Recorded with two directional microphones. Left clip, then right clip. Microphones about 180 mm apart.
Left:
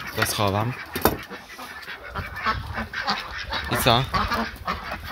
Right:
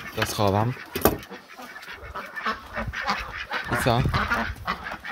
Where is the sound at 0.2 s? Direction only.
30° right (ahead or behind).